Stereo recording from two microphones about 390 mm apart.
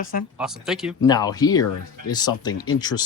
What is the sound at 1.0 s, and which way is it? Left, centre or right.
Speech, centre.